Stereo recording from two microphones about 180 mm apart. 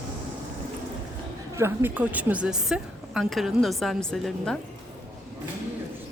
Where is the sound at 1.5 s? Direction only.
15° right (ahead or behind).